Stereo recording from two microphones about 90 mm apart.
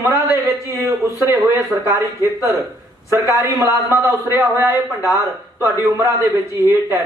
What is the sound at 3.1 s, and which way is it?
A man's voice, 30° right (ahead or behind).